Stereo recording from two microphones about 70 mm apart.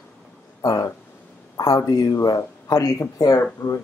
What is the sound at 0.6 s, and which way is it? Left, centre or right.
Speech, left.